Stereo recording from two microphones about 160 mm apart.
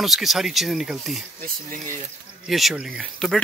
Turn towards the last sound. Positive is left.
turn(degrees=5)  # may be behind; listen again after turning